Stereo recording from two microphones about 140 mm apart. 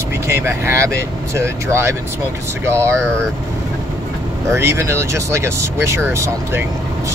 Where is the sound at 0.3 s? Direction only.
20° right (ahead or behind).